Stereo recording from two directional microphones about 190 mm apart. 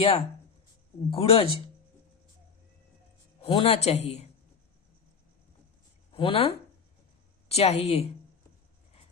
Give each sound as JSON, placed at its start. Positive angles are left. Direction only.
{"t": 0.0, "sound": "speech", "side_deg": 30}
{"t": 3.4, "sound": "speech", "side_deg": 30}
{"t": 6.1, "sound": "a woman's voice", "side_deg": 30}